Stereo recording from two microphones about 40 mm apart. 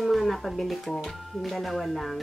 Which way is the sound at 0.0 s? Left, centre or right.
Centre.